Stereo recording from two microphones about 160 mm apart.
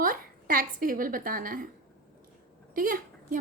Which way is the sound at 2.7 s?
60° right (ahead or behind).